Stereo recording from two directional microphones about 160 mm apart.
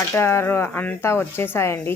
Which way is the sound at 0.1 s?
15° left (ahead or behind).